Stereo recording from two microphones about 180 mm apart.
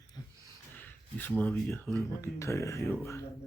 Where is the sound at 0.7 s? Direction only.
10° left (ahead or behind).